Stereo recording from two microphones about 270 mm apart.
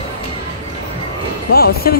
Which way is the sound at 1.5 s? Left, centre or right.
Left.